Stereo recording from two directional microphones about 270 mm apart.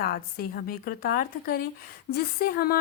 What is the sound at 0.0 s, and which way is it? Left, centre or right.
Speech, left.